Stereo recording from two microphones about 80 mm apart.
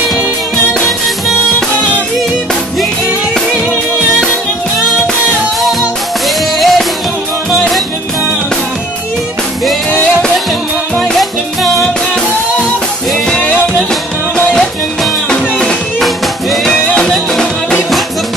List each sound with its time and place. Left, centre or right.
6.2 s music: centre
11.0 s music: centre
13.4 s music: centre